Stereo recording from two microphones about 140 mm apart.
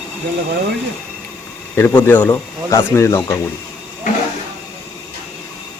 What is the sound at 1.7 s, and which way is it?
Speech, 15° left (ahead or behind).